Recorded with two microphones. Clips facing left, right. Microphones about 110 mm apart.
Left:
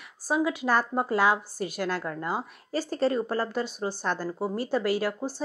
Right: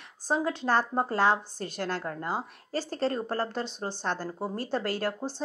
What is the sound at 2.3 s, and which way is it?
Speech, 15° left (ahead or behind).